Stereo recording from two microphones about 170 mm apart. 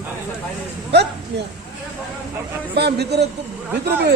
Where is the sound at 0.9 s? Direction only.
80° right.